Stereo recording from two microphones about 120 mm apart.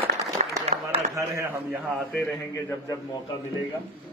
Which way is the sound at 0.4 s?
90° right.